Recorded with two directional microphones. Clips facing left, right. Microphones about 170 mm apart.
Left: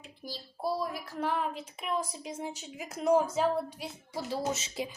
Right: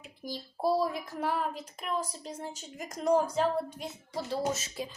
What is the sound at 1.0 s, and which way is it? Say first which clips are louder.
A woman's voice: even; 10° right (ahead or behind).